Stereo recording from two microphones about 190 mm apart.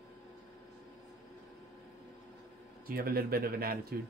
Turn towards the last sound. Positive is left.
turn(degrees=-55)  # may be behind; listen again after turning